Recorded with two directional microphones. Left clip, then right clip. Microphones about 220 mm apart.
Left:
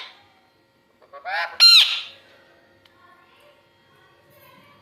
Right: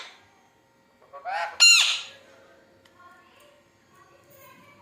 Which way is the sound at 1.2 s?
25° left (ahead or behind).